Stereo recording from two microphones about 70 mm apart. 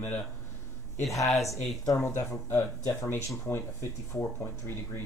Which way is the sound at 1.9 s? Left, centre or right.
Left.